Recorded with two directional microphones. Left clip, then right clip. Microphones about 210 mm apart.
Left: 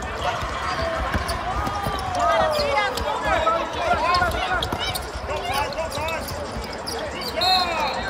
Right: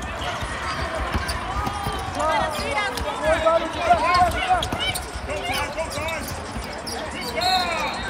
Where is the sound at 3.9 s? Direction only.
25° right (ahead or behind).